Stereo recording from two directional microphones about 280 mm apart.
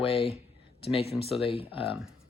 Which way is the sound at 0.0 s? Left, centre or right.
Centre.